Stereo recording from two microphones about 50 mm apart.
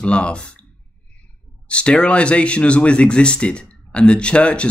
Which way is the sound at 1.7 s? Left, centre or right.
Left.